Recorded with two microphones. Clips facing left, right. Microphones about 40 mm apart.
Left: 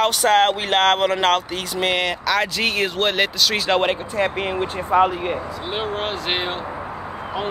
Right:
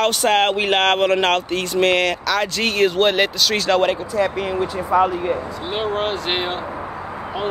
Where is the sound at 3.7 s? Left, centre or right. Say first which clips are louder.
Right 2 dB; left.